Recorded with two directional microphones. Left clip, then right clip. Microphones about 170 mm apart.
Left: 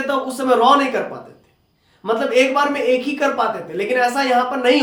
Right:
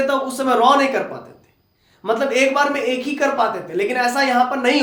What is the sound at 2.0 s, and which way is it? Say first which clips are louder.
Speech: left 1 dB; 25° right (ahead or behind).